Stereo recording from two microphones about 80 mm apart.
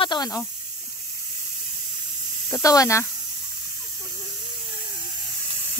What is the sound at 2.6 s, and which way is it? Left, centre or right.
Speech, left.